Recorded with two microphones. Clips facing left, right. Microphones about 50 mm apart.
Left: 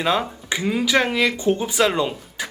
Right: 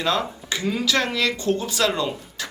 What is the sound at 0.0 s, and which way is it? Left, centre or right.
Speech, centre.